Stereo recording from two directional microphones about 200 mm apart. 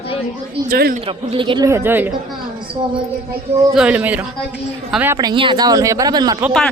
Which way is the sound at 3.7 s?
5° right (ahead or behind).